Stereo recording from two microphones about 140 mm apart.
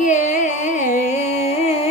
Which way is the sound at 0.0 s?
60° left (ahead or behind).